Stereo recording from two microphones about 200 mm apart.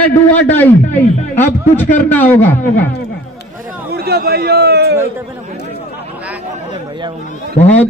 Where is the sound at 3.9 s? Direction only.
55° right (ahead or behind).